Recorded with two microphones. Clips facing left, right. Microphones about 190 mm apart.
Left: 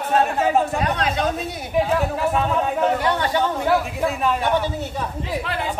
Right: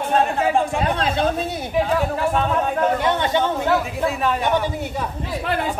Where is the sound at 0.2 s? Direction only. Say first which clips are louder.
Left 1 dB; centre (ahead or behind).